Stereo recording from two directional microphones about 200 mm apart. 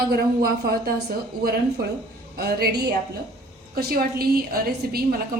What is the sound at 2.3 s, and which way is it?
A woman's voice, 50° right (ahead or behind).